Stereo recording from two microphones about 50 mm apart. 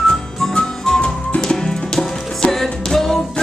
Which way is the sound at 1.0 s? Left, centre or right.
Left.